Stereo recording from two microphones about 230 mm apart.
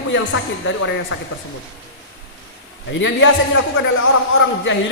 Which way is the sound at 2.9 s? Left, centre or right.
Left.